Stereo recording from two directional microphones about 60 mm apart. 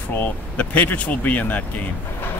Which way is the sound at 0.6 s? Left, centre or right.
Left.